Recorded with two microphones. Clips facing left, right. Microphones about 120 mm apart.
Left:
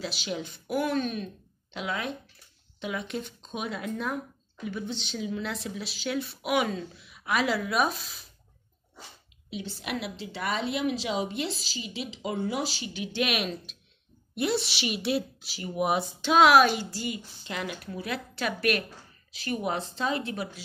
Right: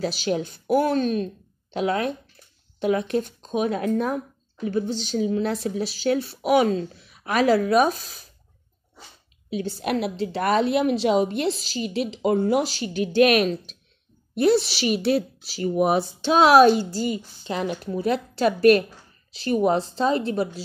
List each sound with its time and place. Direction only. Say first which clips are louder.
0.0 s a woman's voice: right 9 dB; 45° right (ahead or behind)
9.5 s a woman's voice: right 9 dB; 45° right (ahead or behind)